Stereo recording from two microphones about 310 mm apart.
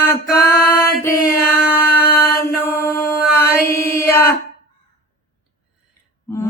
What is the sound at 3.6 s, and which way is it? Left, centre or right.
Chant, centre.